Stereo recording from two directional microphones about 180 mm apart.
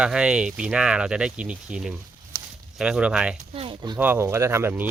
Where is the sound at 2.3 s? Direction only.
15° right (ahead or behind).